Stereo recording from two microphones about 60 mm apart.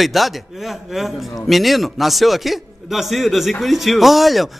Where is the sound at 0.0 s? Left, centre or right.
Centre.